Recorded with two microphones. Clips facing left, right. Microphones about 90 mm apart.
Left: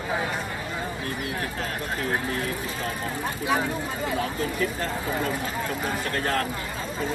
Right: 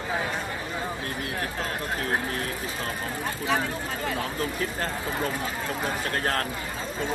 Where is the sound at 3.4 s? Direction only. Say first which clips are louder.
Left 2 dB; 15° left (ahead or behind).